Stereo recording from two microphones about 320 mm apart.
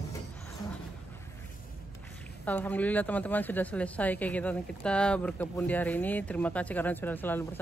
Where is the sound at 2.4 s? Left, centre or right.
Centre.